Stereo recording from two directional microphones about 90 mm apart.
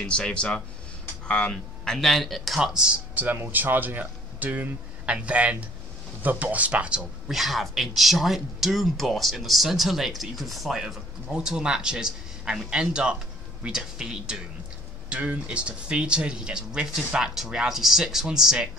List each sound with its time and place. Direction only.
0.0 s speech: 10° left (ahead or behind); by 7.0 s 15° right (ahead or behind)
7.2 s speech: 5° right (ahead or behind)